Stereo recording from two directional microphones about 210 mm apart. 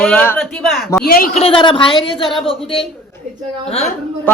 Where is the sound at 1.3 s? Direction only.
25° left (ahead or behind).